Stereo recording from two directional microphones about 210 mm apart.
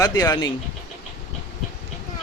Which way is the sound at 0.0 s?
15° left (ahead or behind).